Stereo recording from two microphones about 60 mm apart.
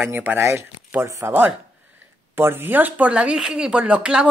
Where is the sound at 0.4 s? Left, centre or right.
Right.